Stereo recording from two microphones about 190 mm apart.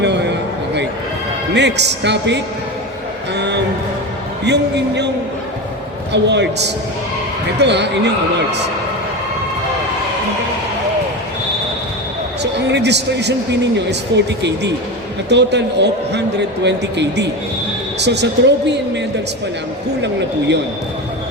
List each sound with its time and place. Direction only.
0.0 s a sound: 65° right (ahead or behind)
1.5 s a man's voice: 65° right (ahead or behind)
3.3 s music: 65° right (ahead or behind)
4.4 s a man's voice: 65° right (ahead or behind)
6.2 s a man's voice: 65° right (ahead or behind)
7.6 s a man's voice: 65° right (ahead or behind)
12.4 s a man's voice: 65° right (ahead or behind)
15.3 s a man's voice: 65° right (ahead or behind)